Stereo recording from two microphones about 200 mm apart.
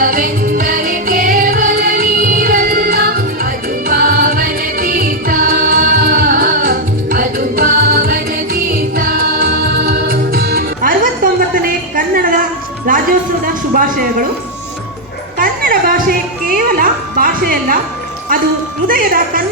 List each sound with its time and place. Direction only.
0.0 s music: 45° right (ahead or behind)
15.4 s music: 45° right (ahead or behind)
18.9 s music: 45° right (ahead or behind)